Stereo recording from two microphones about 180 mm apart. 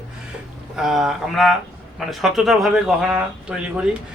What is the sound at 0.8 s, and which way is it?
Speech, centre (ahead or behind).